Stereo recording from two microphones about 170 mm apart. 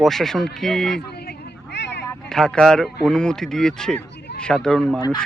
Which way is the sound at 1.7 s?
90° left.